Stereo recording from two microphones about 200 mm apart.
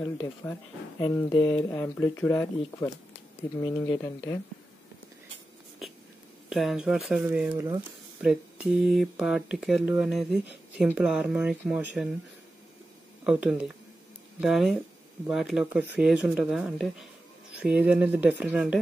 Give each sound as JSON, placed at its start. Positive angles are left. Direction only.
{"t": 0.9, "sound": "speech", "side_deg": 20}
{"t": 1.7, "sound": "speech", "side_deg": 5}
{"t": 6.5, "sound": "speech", "side_deg": 0}
{"t": 13.2, "sound": "speech", "side_deg": -5}